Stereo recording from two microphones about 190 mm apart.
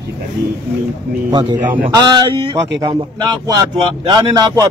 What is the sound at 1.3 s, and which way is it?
A man's voice, 25° right (ahead or behind).